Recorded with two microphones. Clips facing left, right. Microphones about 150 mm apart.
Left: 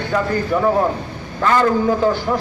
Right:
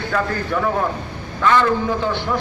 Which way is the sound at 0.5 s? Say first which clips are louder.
Left 4 dB; 35° left (ahead or behind).